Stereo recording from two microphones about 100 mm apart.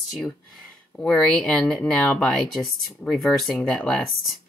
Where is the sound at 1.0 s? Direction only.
10° left (ahead or behind).